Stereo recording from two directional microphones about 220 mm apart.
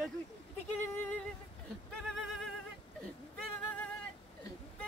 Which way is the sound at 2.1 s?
Centre (ahead or behind).